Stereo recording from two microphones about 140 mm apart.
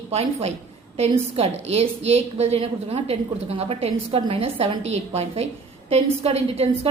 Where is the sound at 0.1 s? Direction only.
50° right (ahead or behind).